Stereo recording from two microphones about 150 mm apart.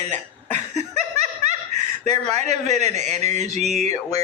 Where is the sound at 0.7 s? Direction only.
50° right (ahead or behind).